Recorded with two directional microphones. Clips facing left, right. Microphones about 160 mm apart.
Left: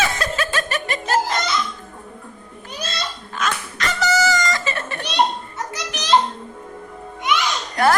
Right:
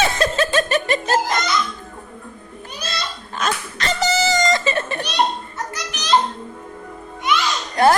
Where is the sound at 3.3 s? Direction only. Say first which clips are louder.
Right 1 dB; 30° right (ahead or behind).